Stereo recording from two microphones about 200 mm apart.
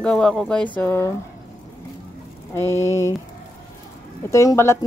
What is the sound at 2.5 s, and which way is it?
Speech, 15° left (ahead or behind).